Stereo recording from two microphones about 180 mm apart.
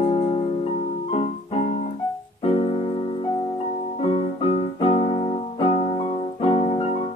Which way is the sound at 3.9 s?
35° left (ahead or behind).